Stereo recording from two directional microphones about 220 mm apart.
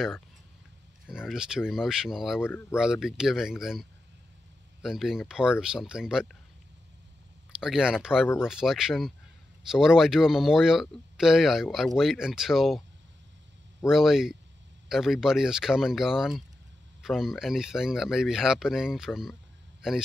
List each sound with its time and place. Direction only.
1.0 s speech: centre (ahead or behind)
2.4 s speech: 10° left (ahead or behind)
2.8 s speech: centre (ahead or behind)
4.8 s speech: centre (ahead or behind)
7.6 s speech: 5° right (ahead or behind)